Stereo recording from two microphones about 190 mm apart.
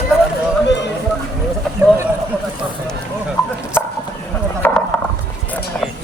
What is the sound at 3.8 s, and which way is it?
Clip-clop, 10° left (ahead or behind).